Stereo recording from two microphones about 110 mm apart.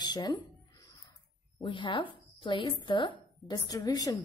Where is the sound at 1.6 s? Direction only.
50° left (ahead or behind).